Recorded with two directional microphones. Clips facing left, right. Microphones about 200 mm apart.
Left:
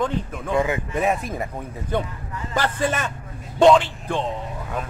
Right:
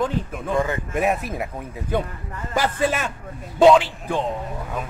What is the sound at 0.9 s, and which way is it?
A man's voice, 5° right (ahead or behind).